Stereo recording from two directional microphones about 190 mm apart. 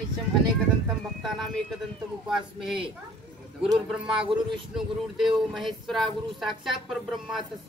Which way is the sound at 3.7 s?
5° right (ahead or behind).